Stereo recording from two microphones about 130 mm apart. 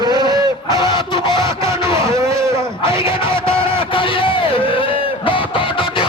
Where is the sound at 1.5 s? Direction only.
20° right (ahead or behind).